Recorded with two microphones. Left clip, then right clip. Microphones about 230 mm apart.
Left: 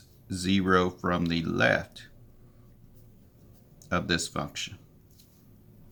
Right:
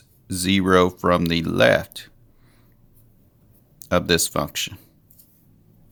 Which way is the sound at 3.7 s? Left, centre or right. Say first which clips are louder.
Right 9 dB; right.